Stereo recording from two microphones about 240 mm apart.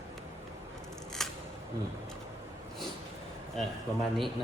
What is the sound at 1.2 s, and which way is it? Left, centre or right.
Scissors, centre.